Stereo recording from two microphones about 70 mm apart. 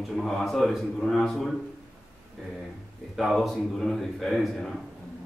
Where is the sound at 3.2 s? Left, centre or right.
Centre.